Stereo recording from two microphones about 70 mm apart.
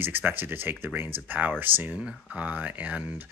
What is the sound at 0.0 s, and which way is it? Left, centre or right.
Speech, right.